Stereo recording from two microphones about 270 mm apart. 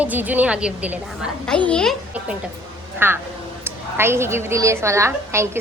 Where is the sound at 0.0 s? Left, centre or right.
Centre.